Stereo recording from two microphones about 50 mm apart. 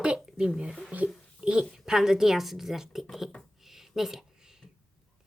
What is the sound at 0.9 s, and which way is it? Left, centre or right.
Speech, right.